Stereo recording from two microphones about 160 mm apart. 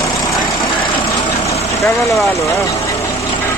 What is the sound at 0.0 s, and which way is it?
Vehicle, 20° left (ahead or behind).